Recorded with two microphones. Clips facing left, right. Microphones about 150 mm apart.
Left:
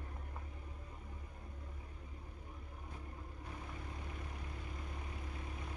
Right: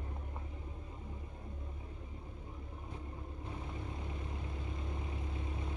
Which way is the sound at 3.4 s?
25° right (ahead or behind).